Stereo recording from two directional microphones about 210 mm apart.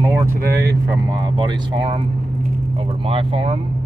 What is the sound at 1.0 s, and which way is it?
Speech, 20° right (ahead or behind).